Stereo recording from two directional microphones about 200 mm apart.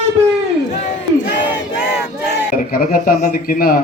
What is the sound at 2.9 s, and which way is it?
Speech, 40° left (ahead or behind).